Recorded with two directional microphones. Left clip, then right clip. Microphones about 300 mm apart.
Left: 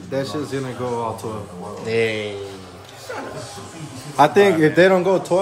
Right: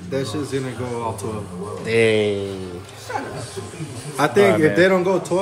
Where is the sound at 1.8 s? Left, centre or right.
Centre.